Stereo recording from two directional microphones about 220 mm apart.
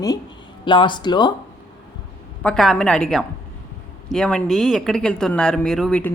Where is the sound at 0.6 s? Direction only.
20° left (ahead or behind).